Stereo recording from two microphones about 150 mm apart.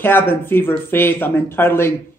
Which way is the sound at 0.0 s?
15° left (ahead or behind).